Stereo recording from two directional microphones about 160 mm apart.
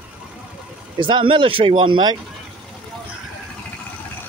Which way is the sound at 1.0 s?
30° right (ahead or behind).